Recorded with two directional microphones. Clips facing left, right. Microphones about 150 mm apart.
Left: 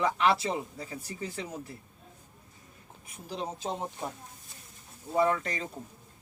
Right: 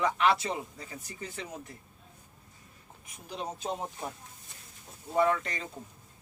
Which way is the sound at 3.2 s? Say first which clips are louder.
Left 2 dB; 30° left (ahead or behind).